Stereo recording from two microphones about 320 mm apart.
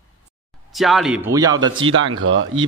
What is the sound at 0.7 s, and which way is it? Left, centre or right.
A man's voice, centre.